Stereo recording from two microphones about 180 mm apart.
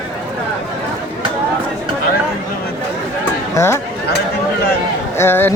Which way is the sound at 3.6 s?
15° left (ahead or behind).